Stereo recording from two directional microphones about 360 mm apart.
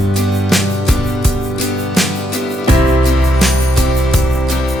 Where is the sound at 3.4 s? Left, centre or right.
Centre.